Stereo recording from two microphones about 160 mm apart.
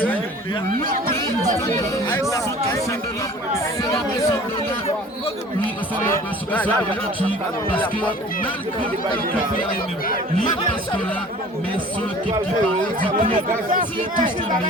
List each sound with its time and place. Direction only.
3.9 s speech: 15° left (ahead or behind)
7.3 s speech: 10° left (ahead or behind)
13.7 s speech: 55° right (ahead or behind)